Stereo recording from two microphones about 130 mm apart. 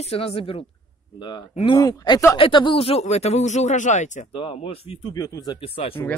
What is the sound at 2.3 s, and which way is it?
Speech, 40° left (ahead or behind).